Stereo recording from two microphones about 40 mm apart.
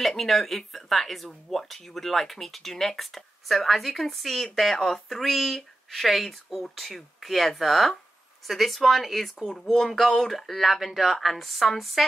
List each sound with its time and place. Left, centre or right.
0.2 s speech: centre